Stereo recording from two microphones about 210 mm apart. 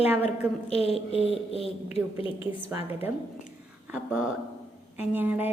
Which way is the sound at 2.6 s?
10° right (ahead or behind).